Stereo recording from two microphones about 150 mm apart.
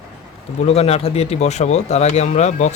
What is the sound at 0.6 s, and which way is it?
Speech, 45° left (ahead or behind).